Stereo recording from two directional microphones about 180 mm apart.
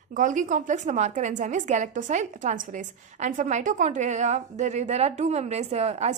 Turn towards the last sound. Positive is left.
turn(degrees=-35)  # may be behind; listen again after turning